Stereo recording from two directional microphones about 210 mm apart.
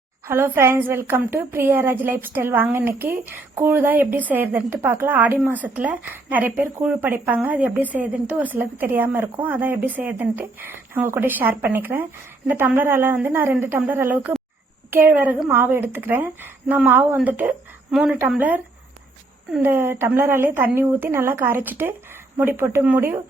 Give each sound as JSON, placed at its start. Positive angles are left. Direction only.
{"t": 0.3, "sound": "a woman's voice", "side_deg": -10}